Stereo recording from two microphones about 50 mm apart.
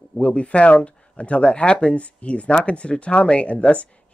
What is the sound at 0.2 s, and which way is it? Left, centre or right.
Speech, left.